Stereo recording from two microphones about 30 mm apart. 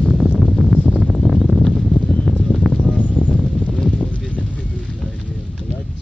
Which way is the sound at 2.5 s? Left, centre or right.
Left.